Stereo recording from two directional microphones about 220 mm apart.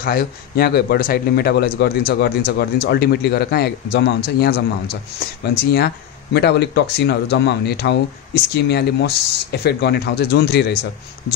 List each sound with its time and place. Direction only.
0.0 s speech: 45° left (ahead or behind)